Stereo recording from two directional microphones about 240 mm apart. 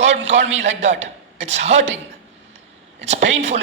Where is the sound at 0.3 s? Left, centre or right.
Right.